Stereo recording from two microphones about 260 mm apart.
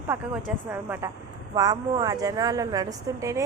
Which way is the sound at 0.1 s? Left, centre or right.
Centre.